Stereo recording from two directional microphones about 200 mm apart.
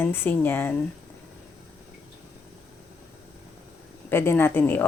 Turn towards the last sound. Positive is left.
turn(degrees=10)  # may be behind; listen again after turning